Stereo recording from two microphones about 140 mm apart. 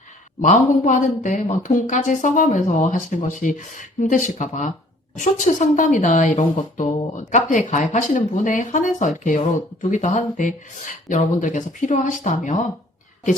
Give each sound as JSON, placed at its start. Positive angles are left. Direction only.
{"t": 0.4, "sound": "a woman's voice", "side_deg": 65}